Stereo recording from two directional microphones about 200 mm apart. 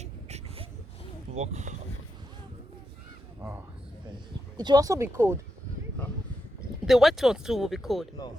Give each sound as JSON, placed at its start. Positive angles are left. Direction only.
{"t": 0.0, "sound": "a sound", "side_deg": -35}
{"t": 1.3, "sound": "speech", "side_deg": -35}
{"t": 4.5, "sound": "speech", "side_deg": -20}
{"t": 6.8, "sound": "speech", "side_deg": 0}